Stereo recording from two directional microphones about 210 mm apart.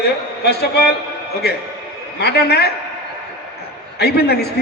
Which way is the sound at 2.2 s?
50° left (ahead or behind).